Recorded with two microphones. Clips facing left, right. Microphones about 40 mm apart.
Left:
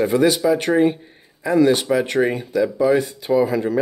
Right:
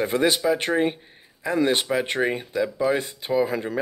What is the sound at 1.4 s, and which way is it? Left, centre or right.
Speech, right.